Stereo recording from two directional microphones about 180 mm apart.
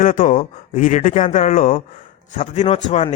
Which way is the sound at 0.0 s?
50° left (ahead or behind).